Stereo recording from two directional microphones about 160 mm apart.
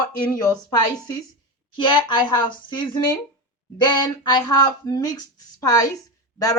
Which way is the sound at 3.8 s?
25° left (ahead or behind).